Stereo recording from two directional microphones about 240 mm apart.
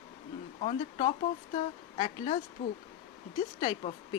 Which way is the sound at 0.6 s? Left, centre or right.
Left.